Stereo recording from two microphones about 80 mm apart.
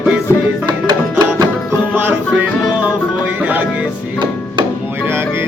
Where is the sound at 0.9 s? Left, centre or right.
Right.